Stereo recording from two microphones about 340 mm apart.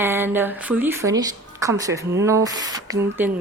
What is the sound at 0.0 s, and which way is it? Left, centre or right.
A woman's voice, centre.